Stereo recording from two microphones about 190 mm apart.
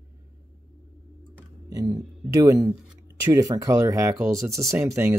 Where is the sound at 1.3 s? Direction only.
15° right (ahead or behind).